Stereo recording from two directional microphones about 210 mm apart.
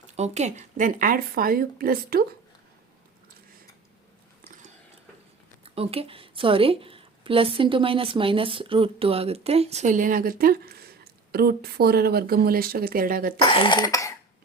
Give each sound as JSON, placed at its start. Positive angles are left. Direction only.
{"t": 0.2, "sound": "a woman's voice", "side_deg": -35}
{"t": 5.6, "sound": "a woman's voice", "side_deg": -30}
{"t": 13.4, "sound": "speech", "side_deg": 25}